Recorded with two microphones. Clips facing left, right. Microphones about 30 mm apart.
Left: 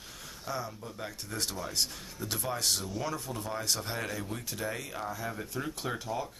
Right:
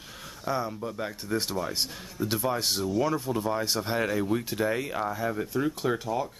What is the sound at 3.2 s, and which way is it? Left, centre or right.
Speech, centre.